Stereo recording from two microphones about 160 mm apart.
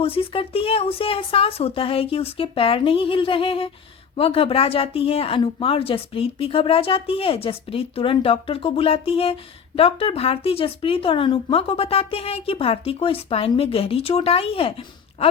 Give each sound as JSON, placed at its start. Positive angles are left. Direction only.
{"t": 0.0, "sound": "a woman's voice", "side_deg": 35}